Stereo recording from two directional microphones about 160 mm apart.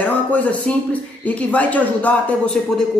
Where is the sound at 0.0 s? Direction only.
10° left (ahead or behind).